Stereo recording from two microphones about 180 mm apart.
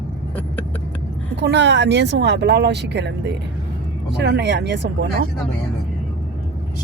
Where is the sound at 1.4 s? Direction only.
75° right (ahead or behind).